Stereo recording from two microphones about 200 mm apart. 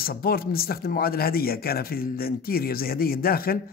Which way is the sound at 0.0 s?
50° left (ahead or behind).